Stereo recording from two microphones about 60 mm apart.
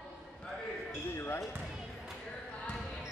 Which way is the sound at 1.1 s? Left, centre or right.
Left.